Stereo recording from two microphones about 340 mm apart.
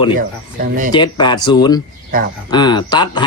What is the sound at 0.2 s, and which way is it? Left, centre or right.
Speech, right.